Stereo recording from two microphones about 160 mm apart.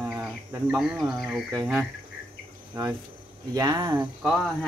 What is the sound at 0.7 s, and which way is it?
Speech, centre (ahead or behind).